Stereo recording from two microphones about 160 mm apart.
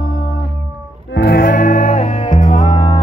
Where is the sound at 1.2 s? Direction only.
90° left.